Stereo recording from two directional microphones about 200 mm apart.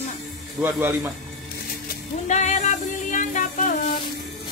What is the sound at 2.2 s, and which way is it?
Music, 35° left (ahead or behind).